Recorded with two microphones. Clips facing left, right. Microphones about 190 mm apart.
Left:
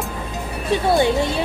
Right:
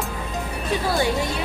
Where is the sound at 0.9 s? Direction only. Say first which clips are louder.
Left 6 dB; 25° left (ahead or behind).